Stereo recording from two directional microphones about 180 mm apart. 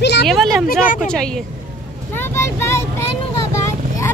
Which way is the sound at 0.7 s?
50° left (ahead or behind).